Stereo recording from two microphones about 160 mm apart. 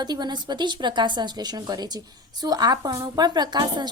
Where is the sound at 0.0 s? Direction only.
25° right (ahead or behind).